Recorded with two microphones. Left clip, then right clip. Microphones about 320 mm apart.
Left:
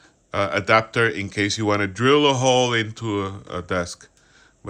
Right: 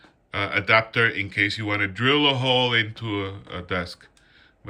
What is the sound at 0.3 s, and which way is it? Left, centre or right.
Speech, centre.